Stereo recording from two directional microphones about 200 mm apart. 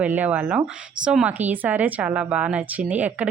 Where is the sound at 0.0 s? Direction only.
5° right (ahead or behind).